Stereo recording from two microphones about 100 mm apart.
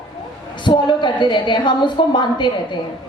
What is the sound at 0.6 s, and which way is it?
A woman's voice, 50° left (ahead or behind).